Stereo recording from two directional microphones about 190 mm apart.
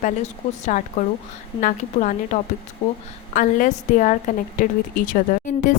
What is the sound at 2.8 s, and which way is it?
Speech, 30° left (ahead or behind).